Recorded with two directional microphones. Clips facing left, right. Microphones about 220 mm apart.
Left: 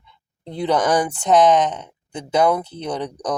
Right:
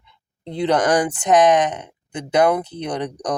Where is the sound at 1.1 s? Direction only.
15° right (ahead or behind).